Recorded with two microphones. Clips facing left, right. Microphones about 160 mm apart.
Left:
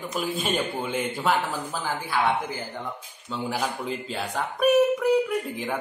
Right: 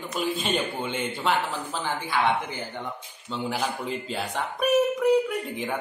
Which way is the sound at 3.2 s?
Centre (ahead or behind).